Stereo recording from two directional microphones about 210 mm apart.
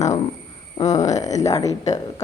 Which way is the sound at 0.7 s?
15° left (ahead or behind).